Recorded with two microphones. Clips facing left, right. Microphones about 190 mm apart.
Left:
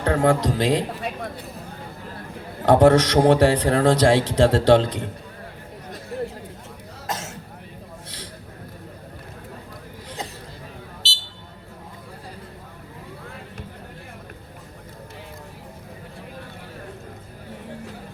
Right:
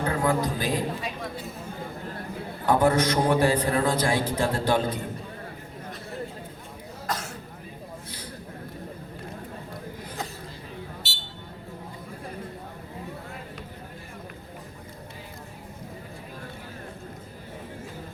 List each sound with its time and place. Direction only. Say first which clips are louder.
0.0 s a man's voice: left 5 dB; 75° left (ahead or behind); by 1.5 s 60° left (ahead or behind)
2.6 s a man's voice: left 7 dB; 80° left
7.1 s cough: left 1 dB; 25° left (ahead or behind)